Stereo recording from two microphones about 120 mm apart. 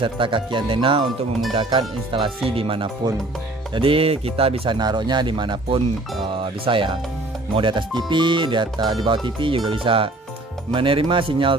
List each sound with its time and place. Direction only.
0.0 s speech: 45° right (ahead or behind)
4.7 s speech: 35° right (ahead or behind)